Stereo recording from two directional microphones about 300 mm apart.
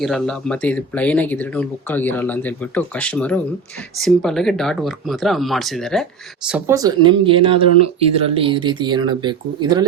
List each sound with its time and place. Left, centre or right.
0.0 s speech: centre
6.5 s speech: centre